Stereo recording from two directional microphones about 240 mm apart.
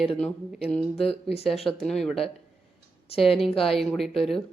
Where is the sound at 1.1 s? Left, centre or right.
Left.